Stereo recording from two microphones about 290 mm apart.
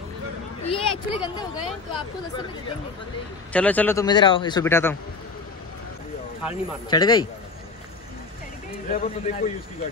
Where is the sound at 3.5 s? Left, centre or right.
Centre.